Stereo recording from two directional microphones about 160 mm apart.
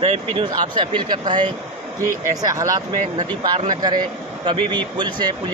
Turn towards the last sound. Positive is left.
turn(degrees=-30)  # may be behind; listen again after turning